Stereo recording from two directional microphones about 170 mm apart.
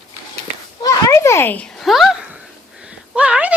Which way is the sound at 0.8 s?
20° left (ahead or behind).